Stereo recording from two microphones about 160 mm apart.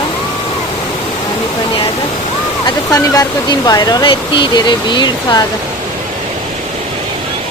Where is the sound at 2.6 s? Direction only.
20° left (ahead or behind).